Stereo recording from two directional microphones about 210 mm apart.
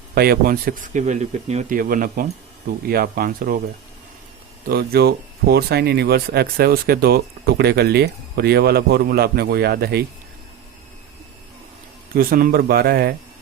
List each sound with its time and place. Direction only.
0.1 s speech: 45° right (ahead or behind)
4.7 s speech: 50° right (ahead or behind)
12.1 s speech: 45° right (ahead or behind)